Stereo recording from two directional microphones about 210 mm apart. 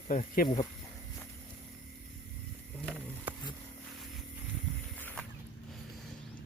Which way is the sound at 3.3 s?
10° right (ahead or behind).